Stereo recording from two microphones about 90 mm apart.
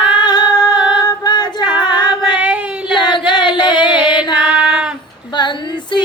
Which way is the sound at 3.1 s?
60° left (ahead or behind).